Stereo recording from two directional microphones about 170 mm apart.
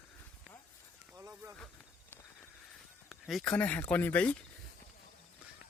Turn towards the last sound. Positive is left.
turn(degrees=10)  # may be behind; listen again after turning